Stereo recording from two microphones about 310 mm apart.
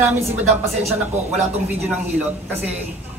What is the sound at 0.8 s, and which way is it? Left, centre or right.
Speech, centre.